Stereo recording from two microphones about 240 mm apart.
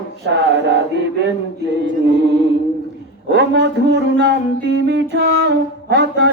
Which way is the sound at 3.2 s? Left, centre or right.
Right.